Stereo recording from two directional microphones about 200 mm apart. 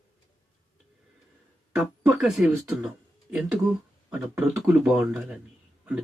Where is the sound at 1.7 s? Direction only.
Centre (ahead or behind).